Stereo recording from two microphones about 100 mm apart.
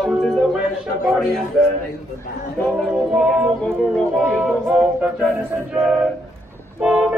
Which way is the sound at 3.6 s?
15° left (ahead or behind).